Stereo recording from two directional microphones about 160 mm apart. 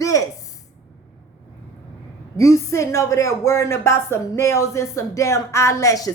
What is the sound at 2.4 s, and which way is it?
A woman's voice, 20° left (ahead or behind).